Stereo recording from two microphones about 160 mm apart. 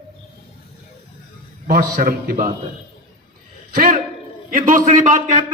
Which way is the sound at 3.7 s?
65° right (ahead or behind).